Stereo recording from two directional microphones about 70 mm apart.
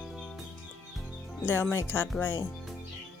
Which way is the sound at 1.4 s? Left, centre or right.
Left.